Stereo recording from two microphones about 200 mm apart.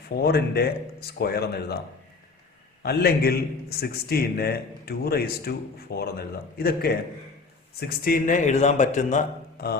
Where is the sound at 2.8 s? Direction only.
50° left (ahead or behind).